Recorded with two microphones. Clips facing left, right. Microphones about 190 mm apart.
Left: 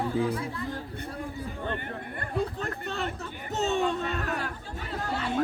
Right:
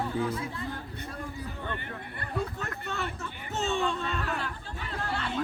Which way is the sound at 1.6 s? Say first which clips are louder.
Left 5 dB; 45° left (ahead or behind).